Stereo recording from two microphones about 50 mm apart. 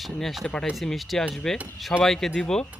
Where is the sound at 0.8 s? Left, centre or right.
Centre.